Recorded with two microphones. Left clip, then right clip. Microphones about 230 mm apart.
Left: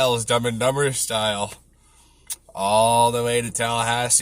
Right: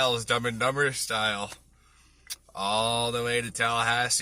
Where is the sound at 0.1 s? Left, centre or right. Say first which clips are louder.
Left 6 dB; centre.